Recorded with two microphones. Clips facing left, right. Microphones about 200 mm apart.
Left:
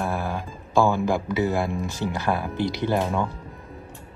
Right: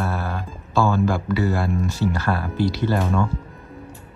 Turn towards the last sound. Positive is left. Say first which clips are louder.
# right 2 dB
turn(degrees=15)  # may be behind; listen again after turning